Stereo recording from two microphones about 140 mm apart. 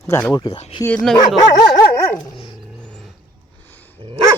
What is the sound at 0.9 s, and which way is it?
Speech, 5° left (ahead or behind).